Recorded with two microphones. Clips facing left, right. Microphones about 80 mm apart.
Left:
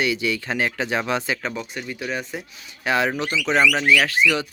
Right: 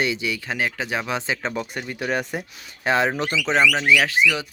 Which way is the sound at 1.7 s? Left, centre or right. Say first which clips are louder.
Right 3 dB; right.